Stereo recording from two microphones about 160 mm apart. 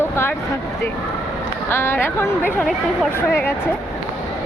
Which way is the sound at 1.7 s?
15° left (ahead or behind).